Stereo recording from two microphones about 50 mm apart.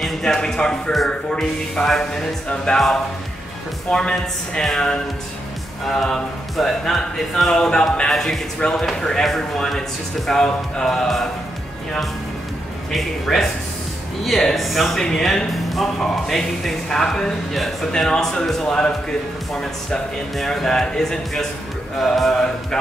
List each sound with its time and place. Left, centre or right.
0.2 s speech: centre
3.9 s speech: centre
8.5 s speech: centre
12.9 s speech: centre
15.5 s speech: centre